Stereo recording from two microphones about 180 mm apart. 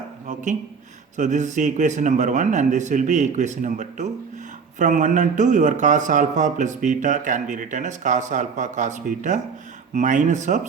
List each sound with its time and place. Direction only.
1.1 s a man's voice: 40° right (ahead or behind)